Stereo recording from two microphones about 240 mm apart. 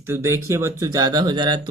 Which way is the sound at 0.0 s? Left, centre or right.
Centre.